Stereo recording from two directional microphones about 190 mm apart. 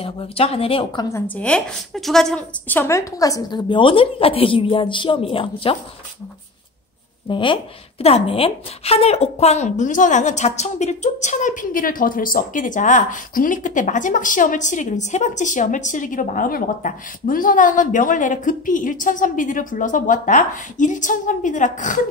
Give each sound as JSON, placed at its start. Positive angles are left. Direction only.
{"t": 0.0, "sound": "speech", "side_deg": 30}
{"t": 1.3, "sound": "speech", "side_deg": 5}
{"t": 7.2, "sound": "a woman's voice", "side_deg": 25}